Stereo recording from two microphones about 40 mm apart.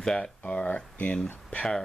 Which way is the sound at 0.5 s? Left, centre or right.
Left.